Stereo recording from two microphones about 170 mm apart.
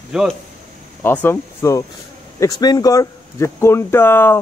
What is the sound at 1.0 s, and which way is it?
Speech, 15° left (ahead or behind).